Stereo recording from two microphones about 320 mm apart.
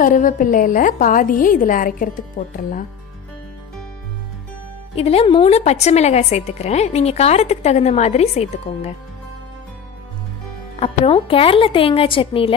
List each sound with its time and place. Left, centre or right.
0.0 s a woman's voice: left
4.9 s a woman's voice: centre
10.8 s a woman's voice: centre